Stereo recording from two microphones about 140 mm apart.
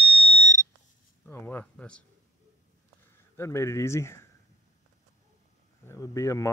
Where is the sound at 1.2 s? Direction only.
15° left (ahead or behind).